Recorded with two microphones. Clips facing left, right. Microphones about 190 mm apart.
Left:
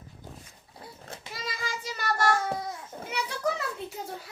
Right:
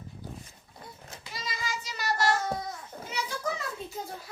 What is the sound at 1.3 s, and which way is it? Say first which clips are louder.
Child singing: even; 55° left (ahead or behind).